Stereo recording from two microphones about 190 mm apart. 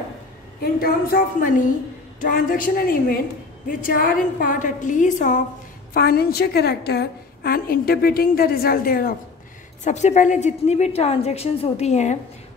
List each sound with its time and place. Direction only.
0.6 s a woman's voice: 50° left (ahead or behind)
5.9 s a woman's voice: 55° left (ahead or behind)
9.8 s a woman's voice: 40° left (ahead or behind)